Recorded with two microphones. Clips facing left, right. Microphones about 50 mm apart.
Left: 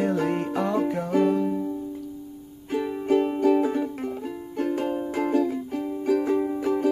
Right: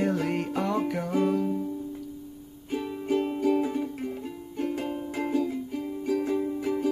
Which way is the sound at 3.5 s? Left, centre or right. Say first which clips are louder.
Left 4 dB; left.